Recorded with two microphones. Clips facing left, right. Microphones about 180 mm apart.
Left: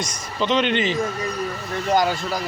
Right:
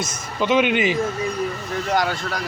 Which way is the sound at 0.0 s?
5° right (ahead or behind).